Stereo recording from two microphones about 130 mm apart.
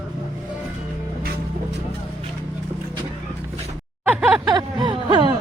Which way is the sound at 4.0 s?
10° right (ahead or behind).